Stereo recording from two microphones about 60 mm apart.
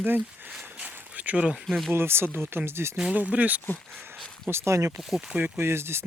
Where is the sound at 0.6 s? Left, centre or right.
Right.